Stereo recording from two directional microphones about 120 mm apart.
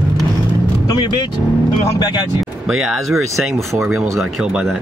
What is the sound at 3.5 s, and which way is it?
Speech, 20° right (ahead or behind).